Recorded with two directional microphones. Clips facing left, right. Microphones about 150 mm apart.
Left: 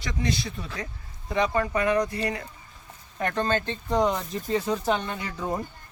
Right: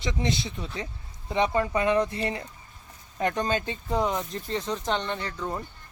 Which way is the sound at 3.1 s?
15° right (ahead or behind).